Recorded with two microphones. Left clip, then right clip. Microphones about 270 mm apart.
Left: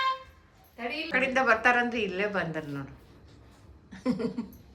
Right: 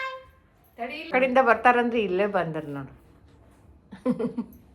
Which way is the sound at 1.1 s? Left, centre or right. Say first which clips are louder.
Right 5 dB; centre.